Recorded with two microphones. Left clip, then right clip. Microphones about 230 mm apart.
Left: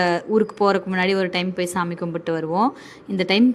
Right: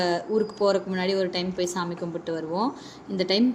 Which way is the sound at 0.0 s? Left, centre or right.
Left.